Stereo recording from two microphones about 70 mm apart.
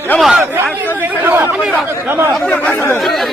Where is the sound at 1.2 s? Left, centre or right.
Right.